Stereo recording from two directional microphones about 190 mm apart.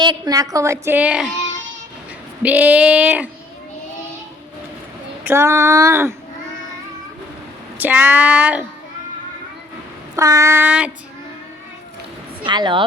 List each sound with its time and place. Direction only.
0.0 s a woman's voice: 20° right (ahead or behind); by 1.3 s 5° right (ahead or behind)
2.4 s a woman's voice: 10° right (ahead or behind)
5.2 s a woman's voice: 15° right (ahead or behind)
7.8 s a woman's voice: 10° right (ahead or behind)
10.2 s a woman's voice: 15° right (ahead or behind)
12.5 s speech: 25° right (ahead or behind)